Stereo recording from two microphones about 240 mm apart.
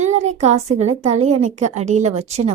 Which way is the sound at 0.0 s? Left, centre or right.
Right.